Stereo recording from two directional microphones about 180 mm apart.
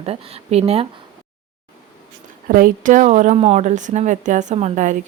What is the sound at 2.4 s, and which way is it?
Speech, 50° right (ahead or behind).